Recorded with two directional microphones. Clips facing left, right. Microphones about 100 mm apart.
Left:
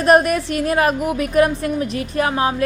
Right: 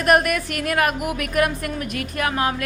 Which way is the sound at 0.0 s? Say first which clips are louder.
Left 4 dB; 30° left (ahead or behind).